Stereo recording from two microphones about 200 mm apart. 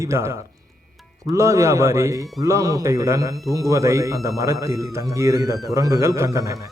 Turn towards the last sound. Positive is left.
turn(degrees=-15)  # may be behind; listen again after turning